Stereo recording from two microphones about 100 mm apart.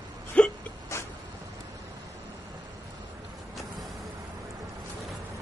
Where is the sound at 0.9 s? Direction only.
30° left (ahead or behind).